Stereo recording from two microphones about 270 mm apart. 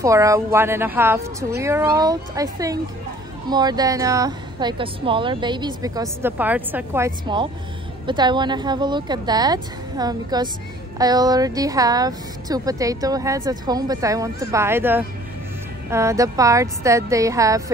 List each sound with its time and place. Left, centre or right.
0.0 s speech: centre